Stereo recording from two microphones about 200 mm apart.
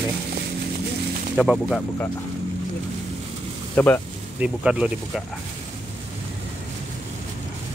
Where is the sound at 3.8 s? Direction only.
10° left (ahead or behind).